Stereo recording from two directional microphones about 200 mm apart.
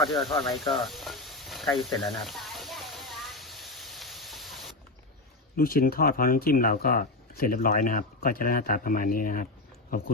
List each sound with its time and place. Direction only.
0.1 s speech: centre (ahead or behind)
0.5 s snake: centre (ahead or behind)
5.5 s speech: 45° left (ahead or behind)